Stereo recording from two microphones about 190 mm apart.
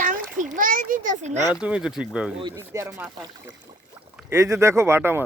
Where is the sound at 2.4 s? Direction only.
20° right (ahead or behind).